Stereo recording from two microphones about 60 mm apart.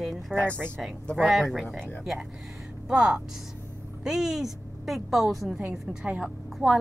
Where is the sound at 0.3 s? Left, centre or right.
Left.